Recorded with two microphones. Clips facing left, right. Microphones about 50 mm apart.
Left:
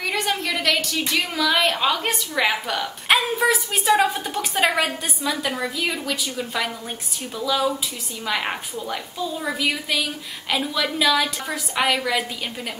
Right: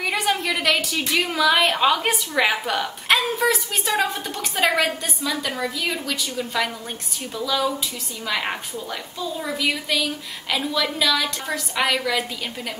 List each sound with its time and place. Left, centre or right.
0.0 s a woman's voice: centre
3.1 s a woman's voice: centre